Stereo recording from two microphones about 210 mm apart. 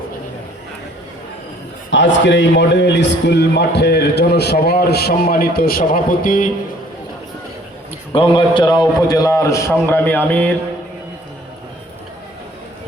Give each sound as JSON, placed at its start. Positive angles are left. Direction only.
{"t": 1.9, "sound": "a man's voice", "side_deg": 60}
{"t": 8.1, "sound": "a man's voice", "side_deg": 25}